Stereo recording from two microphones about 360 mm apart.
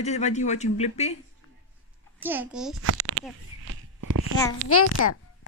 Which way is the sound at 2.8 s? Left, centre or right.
Right.